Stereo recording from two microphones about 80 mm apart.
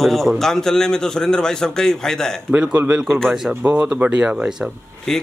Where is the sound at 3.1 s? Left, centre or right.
Centre.